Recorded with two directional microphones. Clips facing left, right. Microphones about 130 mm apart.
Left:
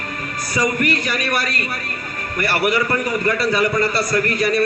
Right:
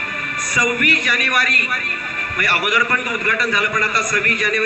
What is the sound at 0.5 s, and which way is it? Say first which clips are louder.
A man's voice: left 1 dB; 35° left (ahead or behind).